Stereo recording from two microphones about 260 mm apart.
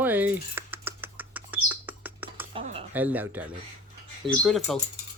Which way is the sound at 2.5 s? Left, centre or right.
Right.